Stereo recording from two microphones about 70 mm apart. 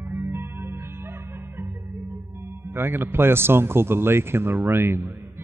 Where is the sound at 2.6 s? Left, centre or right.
Right.